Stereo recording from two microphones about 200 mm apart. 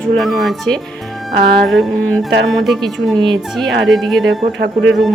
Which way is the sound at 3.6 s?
Centre (ahead or behind).